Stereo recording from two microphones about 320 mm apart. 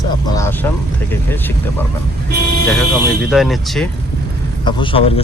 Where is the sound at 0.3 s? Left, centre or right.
Centre.